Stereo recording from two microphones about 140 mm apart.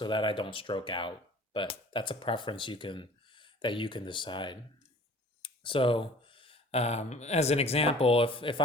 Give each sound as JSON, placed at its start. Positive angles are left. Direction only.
{"t": 0.0, "sound": "speech", "side_deg": 35}